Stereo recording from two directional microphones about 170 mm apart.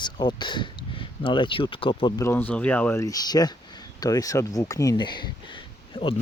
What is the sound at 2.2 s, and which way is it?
Speech, 15° left (ahead or behind).